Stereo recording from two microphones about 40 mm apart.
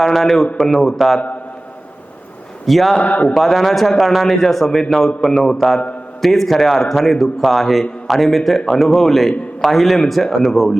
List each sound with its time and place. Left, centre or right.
0.0 s a man's voice: centre
2.6 s a man's voice: centre
3.0 s a man's voice: left
3.3 s a man's voice: centre